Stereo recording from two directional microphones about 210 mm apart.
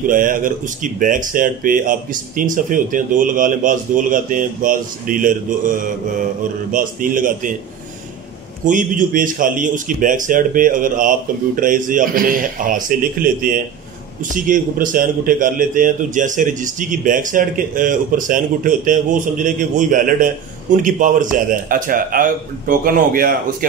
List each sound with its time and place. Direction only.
0.0 s a man's voice: 40° right (ahead or behind)
8.6 s a man's voice: 40° right (ahead or behind)